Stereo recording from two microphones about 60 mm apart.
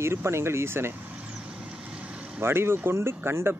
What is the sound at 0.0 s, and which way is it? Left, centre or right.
Speech, right.